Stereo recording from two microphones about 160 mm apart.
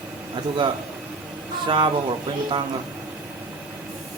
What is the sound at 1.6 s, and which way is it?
Speech, 30° right (ahead or behind).